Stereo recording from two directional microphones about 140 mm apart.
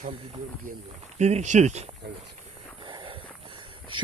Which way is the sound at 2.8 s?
35° right (ahead or behind).